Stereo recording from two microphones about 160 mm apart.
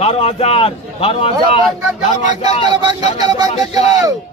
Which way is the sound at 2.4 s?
25° right (ahead or behind).